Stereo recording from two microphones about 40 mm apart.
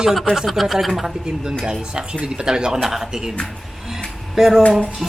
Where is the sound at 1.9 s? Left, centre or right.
Right.